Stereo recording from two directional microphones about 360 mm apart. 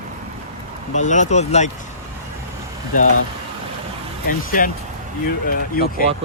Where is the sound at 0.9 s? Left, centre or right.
Centre.